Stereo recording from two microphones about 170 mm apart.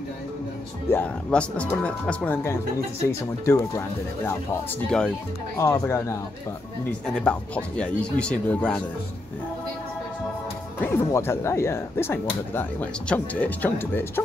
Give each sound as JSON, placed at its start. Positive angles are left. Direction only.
{"t": 0.9, "sound": "speech", "side_deg": 10}
{"t": 4.8, "sound": "speech", "side_deg": 5}
{"t": 5.6, "sound": "speech", "side_deg": 15}
{"t": 7.2, "sound": "speech", "side_deg": 5}
{"t": 10.8, "sound": "speech", "side_deg": 15}